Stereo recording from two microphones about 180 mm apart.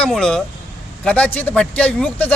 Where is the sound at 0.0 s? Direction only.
5° left (ahead or behind).